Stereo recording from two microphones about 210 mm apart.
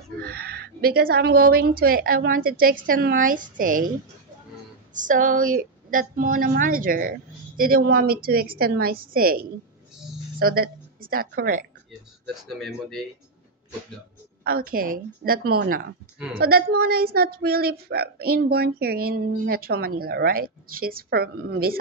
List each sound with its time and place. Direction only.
0.3 s a woman's voice: 50° right (ahead or behind)
4.9 s a woman's voice: 40° right (ahead or behind)
12.4 s speech: centre (ahead or behind)
14.4 s a woman's voice: 45° right (ahead or behind)